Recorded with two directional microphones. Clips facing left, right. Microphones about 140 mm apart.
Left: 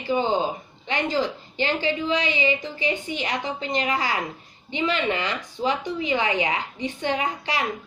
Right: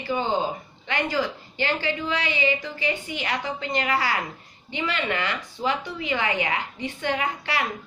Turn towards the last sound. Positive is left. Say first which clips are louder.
# left 1 dB
turn(degrees=20)  # may be behind; listen again after turning